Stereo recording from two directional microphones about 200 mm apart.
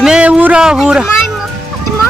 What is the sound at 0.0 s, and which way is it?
Speech, 5° right (ahead or behind).